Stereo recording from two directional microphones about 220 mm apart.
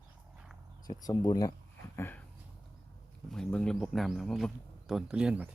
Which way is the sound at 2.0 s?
10° left (ahead or behind).